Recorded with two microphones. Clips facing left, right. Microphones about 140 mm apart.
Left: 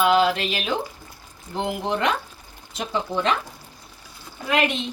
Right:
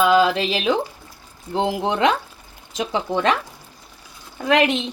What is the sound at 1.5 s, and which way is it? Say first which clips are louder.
A woman's voice: right 4 dB; 90° right.